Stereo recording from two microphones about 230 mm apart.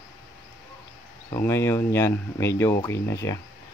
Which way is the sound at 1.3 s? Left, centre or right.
Centre.